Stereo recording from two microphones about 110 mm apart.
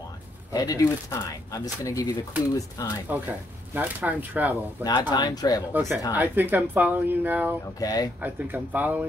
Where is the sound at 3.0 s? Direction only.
15° right (ahead or behind).